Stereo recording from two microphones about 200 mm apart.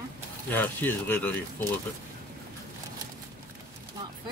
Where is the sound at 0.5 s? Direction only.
10° left (ahead or behind).